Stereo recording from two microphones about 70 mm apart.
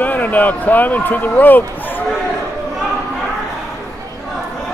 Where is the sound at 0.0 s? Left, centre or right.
Left.